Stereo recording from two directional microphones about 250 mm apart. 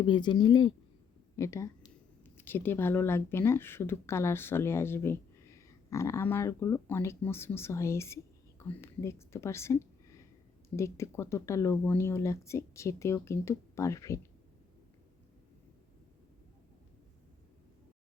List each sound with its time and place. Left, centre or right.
0.0 s speech: centre